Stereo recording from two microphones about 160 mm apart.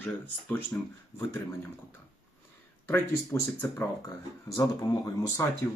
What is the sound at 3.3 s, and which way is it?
Speech, 15° left (ahead or behind).